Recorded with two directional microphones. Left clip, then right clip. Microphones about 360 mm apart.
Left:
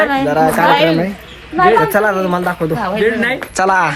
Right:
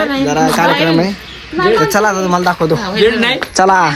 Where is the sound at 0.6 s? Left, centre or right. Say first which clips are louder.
Left 3 dB; left.